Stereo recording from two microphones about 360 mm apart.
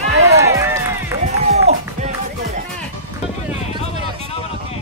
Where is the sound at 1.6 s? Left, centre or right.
Centre.